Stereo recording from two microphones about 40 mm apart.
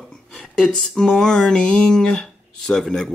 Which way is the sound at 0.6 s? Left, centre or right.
Centre.